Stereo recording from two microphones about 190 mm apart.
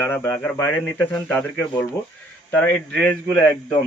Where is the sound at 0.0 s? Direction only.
15° left (ahead or behind).